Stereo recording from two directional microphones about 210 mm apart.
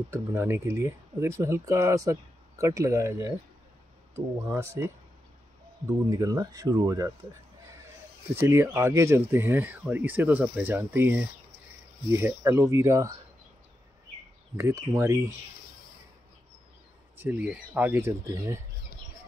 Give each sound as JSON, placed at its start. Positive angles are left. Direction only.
{"t": 0.1, "sound": "speech", "side_deg": -10}
{"t": 4.5, "sound": "speech", "side_deg": -10}
{"t": 6.0, "sound": "speech", "side_deg": -15}
{"t": 8.4, "sound": "speech", "side_deg": -10}
{"t": 14.6, "sound": "speech", "side_deg": -15}
{"t": 17.2, "sound": "speech", "side_deg": -5}